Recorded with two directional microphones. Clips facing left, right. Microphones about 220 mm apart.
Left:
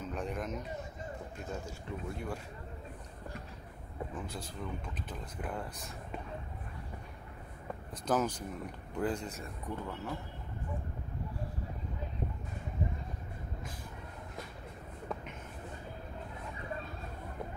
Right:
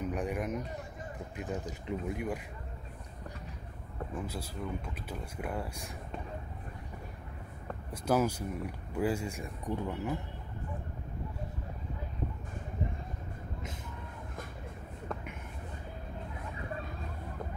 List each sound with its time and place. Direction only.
0.0 s speech: 15° right (ahead or behind)
4.1 s speech: 5° right (ahead or behind)
7.9 s speech: 10° right (ahead or behind)